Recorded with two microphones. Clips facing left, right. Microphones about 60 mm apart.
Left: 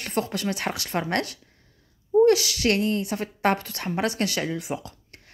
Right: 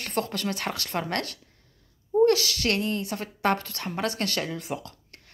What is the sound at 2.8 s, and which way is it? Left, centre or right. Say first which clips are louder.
Speech: left 4 dB; right.